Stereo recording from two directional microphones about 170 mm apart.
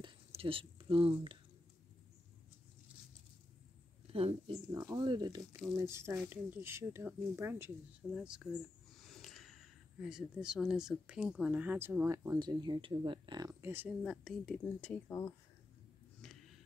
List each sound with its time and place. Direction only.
0.0 s whispering: 35° right (ahead or behind)
4.1 s speech: 35° right (ahead or behind)
4.7 s speech: 20° right (ahead or behind)
8.1 s speech: 5° right (ahead or behind)
14.0 s speech: centre (ahead or behind)